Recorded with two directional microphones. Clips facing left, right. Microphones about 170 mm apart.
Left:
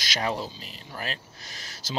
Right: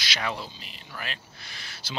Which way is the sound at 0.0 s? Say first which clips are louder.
Left 3 dB; 45° left (ahead or behind).